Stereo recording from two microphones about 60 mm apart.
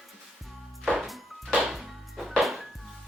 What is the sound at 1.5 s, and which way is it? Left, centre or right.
Music, centre.